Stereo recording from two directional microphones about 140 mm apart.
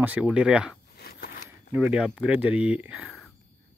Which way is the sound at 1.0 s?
90° left.